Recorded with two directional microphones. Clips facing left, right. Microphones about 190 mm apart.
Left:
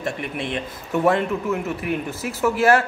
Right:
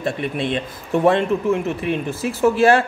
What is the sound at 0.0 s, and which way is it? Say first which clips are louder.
Speech: right 4 dB; 30° right (ahead or behind).